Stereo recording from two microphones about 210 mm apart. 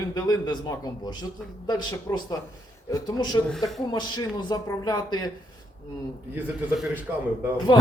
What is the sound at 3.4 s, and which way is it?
Speech, centre (ahead or behind).